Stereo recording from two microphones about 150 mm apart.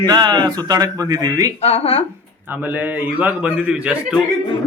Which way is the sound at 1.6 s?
45° left (ahead or behind).